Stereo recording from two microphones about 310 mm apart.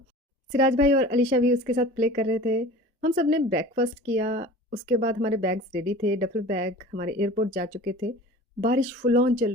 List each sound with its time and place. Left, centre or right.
0.5 s speech: right